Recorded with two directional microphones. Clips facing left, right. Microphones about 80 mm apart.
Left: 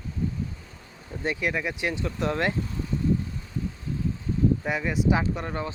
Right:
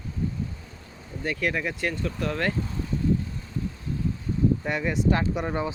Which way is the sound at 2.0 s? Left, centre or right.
Left.